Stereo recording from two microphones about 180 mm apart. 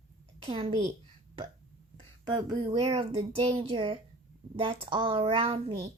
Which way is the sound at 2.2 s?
25° right (ahead or behind).